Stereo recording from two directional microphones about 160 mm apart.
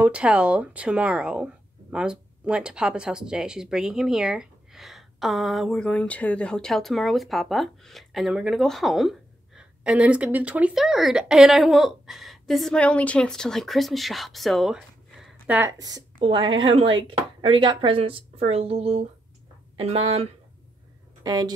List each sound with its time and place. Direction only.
0.0 s speech: 5° right (ahead or behind)
15.8 s speech: 30° right (ahead or behind)
21.2 s speech: 25° right (ahead or behind)